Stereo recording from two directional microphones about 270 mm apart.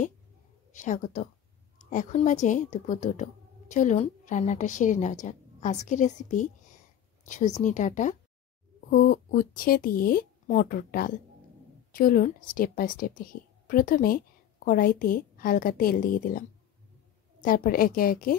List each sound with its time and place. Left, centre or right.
0.7 s speech: left